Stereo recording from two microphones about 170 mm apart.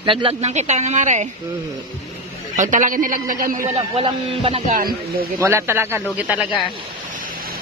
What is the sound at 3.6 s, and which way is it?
Speech, 30° right (ahead or behind).